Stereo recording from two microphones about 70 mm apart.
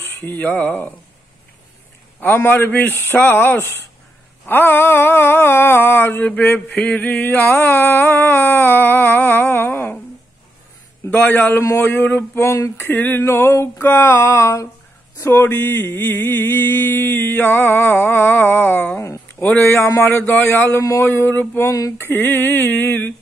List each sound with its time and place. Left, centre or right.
0.0 s speech: left
2.1 s wail: left
11.1 s wail: left
13.2 s mantra: left
19.4 s wail: left
21.0 s mantra: left
21.6 s a sound: left
21.9 s wail: left